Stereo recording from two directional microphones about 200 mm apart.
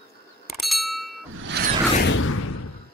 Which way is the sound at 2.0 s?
90° left.